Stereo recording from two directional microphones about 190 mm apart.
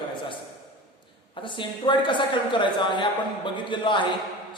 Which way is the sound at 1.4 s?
25° left (ahead or behind).